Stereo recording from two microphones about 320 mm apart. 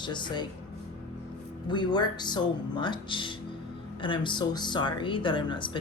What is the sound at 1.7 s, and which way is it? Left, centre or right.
Speech, centre.